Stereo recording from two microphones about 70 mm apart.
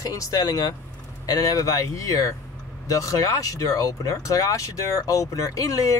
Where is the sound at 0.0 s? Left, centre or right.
Left.